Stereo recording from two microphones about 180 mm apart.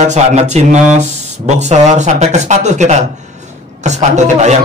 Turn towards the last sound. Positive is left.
turn(degrees=-40)  # may be behind; listen again after turning